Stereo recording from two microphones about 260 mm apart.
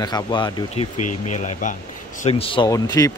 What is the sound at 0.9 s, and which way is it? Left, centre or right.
Speech, left.